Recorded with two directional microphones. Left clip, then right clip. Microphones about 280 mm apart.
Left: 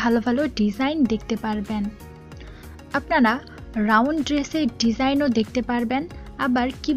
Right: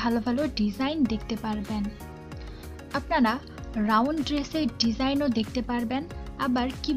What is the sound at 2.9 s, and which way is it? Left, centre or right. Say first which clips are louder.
Speech: left 5 dB; centre.